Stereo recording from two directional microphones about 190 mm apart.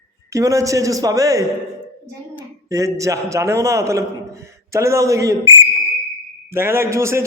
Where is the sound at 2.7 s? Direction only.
15° right (ahead or behind).